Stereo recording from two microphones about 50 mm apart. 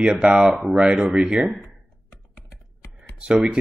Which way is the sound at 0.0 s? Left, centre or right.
Right.